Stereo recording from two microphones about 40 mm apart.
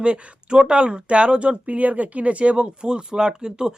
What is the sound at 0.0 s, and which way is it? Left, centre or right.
Speech, right.